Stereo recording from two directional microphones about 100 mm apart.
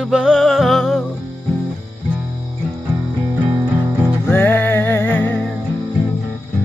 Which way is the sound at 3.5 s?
35° right (ahead or behind).